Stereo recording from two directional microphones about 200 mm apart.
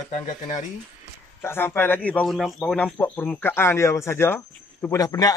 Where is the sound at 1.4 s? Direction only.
10° left (ahead or behind).